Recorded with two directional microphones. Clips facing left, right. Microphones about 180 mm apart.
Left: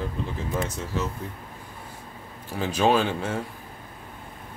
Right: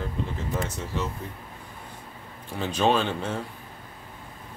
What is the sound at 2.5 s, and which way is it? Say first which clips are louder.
Speech: left 2 dB; 10° left (ahead or behind).